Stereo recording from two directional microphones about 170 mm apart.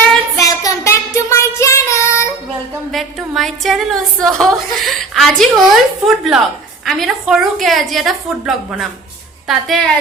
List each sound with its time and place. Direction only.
0.3 s child singing: 20° left (ahead or behind)
2.9 s a woman's voice: centre (ahead or behind)